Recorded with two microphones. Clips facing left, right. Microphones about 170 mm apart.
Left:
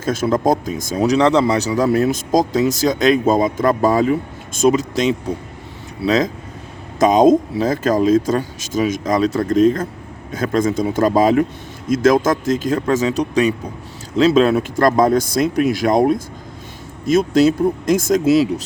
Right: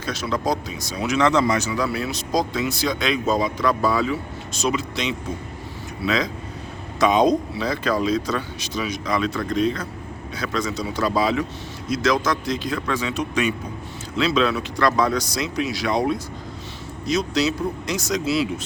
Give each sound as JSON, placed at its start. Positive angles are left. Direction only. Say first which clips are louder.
{"t": 0.0, "sound": "speech", "louder": "left 8 dB", "side_deg": 45}